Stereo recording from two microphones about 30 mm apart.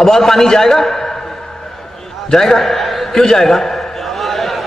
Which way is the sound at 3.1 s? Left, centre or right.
Centre.